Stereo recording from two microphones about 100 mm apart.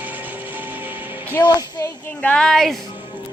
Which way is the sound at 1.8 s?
35° left (ahead or behind).